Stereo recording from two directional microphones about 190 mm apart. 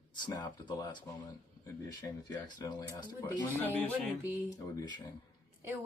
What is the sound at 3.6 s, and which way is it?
Speech, 10° left (ahead or behind).